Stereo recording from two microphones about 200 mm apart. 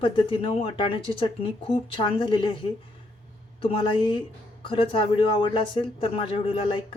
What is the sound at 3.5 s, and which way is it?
Speech, 25° left (ahead or behind).